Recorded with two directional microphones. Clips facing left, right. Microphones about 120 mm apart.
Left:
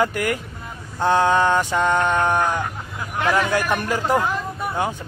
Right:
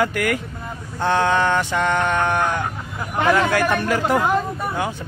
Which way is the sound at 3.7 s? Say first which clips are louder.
Right 2 dB; 15° left (ahead or behind).